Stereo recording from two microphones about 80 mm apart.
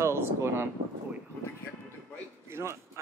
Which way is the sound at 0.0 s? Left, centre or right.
Right.